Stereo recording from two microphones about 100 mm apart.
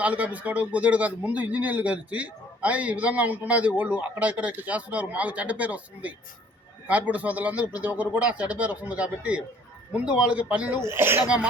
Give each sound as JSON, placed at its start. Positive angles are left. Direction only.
{"t": 0.0, "sound": "a man's voice", "side_deg": -15}
{"t": 10.8, "sound": "speech", "side_deg": -25}